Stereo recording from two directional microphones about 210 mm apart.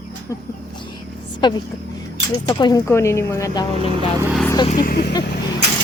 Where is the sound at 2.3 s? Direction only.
20° left (ahead or behind).